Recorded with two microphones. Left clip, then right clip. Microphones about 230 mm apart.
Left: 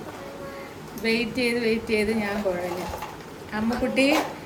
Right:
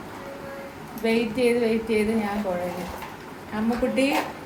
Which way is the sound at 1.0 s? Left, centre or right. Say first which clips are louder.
Right 2 dB; centre.